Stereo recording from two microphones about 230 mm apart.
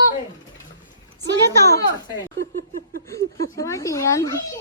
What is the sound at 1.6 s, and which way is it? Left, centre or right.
Speech, centre.